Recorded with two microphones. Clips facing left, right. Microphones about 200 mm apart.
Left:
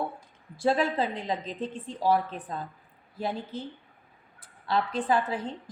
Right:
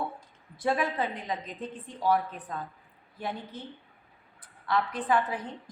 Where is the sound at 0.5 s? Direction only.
30° left (ahead or behind).